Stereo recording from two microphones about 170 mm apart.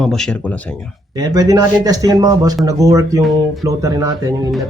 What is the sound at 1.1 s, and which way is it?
Speech, 20° right (ahead or behind).